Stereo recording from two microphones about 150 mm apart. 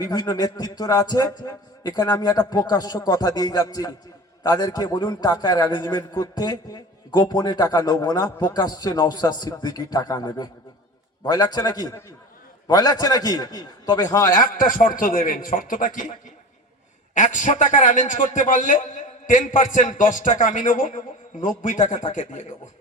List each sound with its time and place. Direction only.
0.0 s a man's voice: 25° left (ahead or behind)
14.3 s a man's voice: 65° left (ahead or behind)
17.2 s a man's voice: 55° left (ahead or behind)